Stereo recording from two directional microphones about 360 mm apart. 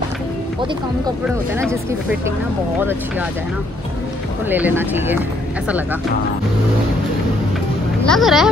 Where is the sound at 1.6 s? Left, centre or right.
Centre.